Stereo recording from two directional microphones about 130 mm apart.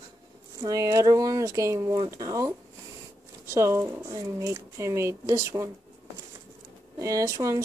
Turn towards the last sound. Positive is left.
turn(degrees=-25)  # may be behind; listen again after turning